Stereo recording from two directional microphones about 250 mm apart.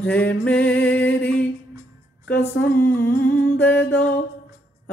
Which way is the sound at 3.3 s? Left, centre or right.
Centre.